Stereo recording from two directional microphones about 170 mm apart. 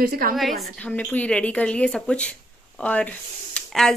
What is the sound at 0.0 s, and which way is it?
Speech, 55° right (ahead or behind).